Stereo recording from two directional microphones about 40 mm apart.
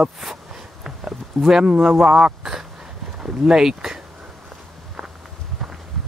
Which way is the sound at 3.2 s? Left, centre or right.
Centre.